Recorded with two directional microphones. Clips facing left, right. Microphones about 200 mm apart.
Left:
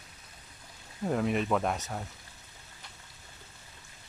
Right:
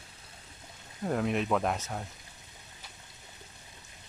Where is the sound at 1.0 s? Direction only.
Centre (ahead or behind).